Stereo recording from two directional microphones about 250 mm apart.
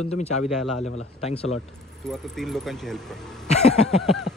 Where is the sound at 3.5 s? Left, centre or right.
Left.